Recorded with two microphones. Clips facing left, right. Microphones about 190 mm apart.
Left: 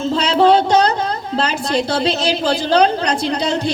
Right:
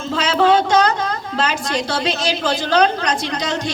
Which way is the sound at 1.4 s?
35° left (ahead or behind).